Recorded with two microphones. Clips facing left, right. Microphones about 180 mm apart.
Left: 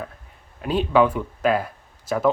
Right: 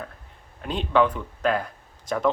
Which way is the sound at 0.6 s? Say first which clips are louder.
Left 3 dB; 5° left (ahead or behind).